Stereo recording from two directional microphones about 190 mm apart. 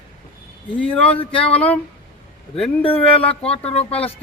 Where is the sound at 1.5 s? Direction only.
5° left (ahead or behind).